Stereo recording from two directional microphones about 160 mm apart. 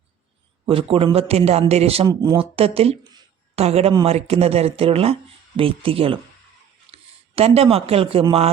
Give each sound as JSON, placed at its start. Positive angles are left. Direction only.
{"t": 0.7, "sound": "a man's voice", "side_deg": -35}
{"t": 2.6, "sound": "a man's voice", "side_deg": -40}